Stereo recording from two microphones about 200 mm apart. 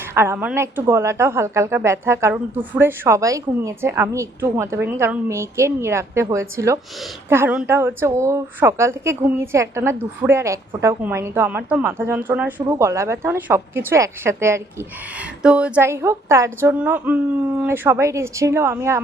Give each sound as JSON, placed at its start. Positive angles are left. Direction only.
{"t": 0.1, "sound": "a woman's voice", "side_deg": -10}